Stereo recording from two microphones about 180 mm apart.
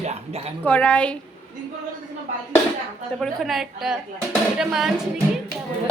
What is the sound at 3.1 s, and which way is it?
A woman's voice, centre (ahead or behind).